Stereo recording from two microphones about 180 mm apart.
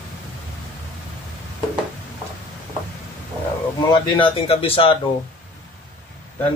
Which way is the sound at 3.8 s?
30° left (ahead or behind).